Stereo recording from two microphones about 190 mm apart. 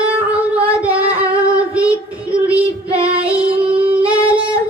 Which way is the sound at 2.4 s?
5° right (ahead or behind).